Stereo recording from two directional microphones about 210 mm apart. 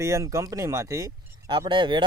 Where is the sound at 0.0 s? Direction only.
15° right (ahead or behind).